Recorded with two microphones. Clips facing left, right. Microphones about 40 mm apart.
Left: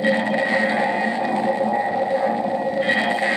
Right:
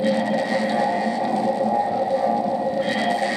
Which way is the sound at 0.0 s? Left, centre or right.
Left.